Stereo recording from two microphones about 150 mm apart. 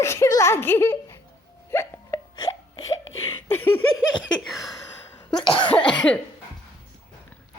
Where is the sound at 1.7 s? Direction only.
15° left (ahead or behind).